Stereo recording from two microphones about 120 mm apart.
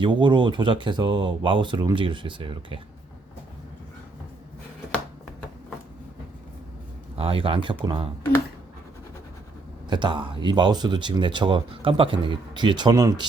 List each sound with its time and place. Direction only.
0.0 s speech: 40° right (ahead or behind)
7.2 s speech: 50° right (ahead or behind)
9.9 s speech: 40° right (ahead or behind)